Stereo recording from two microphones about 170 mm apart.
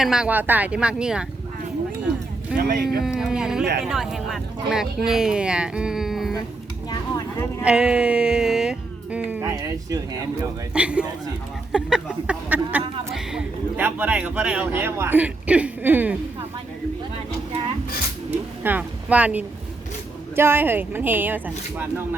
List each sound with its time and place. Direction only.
0.0 s speech: 5° right (ahead or behind)
2.6 s speech: 65° right (ahead or behind)
3.2 s speech: 5° right (ahead or behind)
7.6 s a woman's voice: 5° right (ahead or behind)
10.8 s a woman's voice: 5° right (ahead or behind)
18.3 s a woman's voice: 10° right (ahead or behind)